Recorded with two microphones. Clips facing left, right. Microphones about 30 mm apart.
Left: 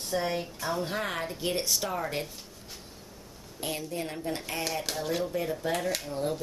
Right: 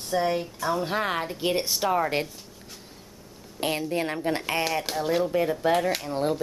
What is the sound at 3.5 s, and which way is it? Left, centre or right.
Speech, right.